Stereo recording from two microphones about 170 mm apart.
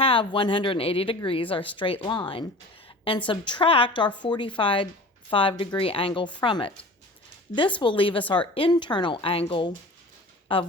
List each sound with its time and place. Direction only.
0.0 s a woman's voice: 30° left (ahead or behind)
7.8 s a woman's voice: 30° left (ahead or behind)